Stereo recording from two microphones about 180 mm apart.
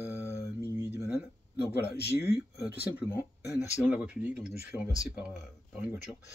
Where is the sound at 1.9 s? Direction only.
65° left (ahead or behind).